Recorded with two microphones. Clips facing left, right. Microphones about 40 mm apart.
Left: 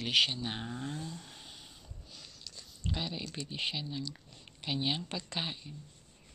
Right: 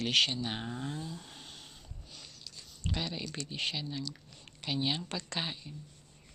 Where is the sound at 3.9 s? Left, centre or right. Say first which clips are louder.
Even; left.